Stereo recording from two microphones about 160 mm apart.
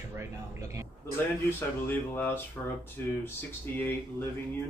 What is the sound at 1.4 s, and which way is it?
Speech, 15° left (ahead or behind).